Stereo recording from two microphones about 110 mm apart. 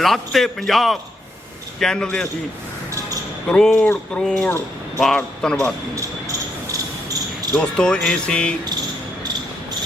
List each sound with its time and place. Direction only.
0.0 s speech: centre (ahead or behind)
3.5 s speech: 5° left (ahead or behind)
6.0 s a sound: 30° right (ahead or behind)
7.5 s speech: 10° left (ahead or behind)